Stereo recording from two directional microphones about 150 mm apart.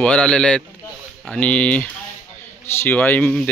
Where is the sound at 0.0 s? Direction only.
5° left (ahead or behind).